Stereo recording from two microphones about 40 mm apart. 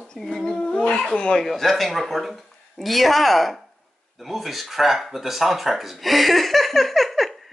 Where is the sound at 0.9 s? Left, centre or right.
Centre.